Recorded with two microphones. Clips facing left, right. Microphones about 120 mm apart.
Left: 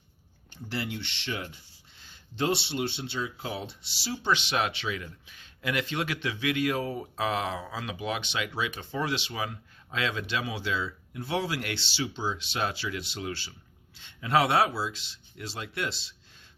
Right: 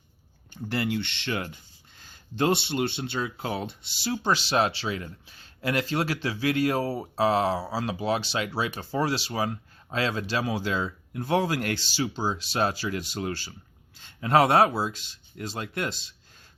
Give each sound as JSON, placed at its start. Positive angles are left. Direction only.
{"t": 0.5, "sound": "speech", "side_deg": -50}